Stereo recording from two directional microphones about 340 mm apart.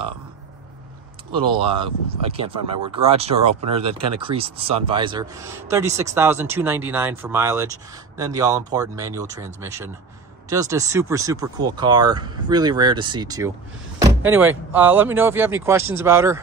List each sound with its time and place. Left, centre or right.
1.5 s speech: centre